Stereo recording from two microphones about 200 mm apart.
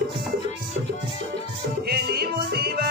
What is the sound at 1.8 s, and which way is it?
Music, 50° right (ahead or behind).